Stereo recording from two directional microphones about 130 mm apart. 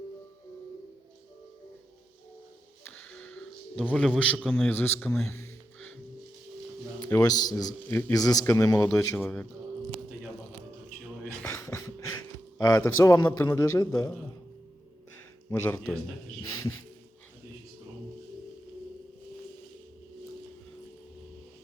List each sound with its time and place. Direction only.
2.9 s a sound: 10° left (ahead or behind)
3.9 s a man's voice: 5° left (ahead or behind)
4.7 s speech: 15° left (ahead or behind)
5.2 s a sound: 20° left (ahead or behind)
7.1 s a man's voice: 30° left (ahead or behind)
7.9 s a man's voice: 15° left (ahead or behind)
8.1 s a man's voice: 30° left (ahead or behind)
9.2 s speech: 10° left (ahead or behind)
11.4 s a sound: 20° left (ahead or behind)
12.8 s a man's voice: 25° left (ahead or behind)
15.4 s speech: 20° left (ahead or behind)